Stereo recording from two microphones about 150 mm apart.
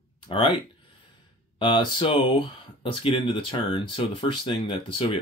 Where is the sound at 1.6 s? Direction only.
30° left (ahead or behind).